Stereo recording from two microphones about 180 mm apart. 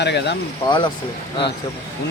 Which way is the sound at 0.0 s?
70° left (ahead or behind).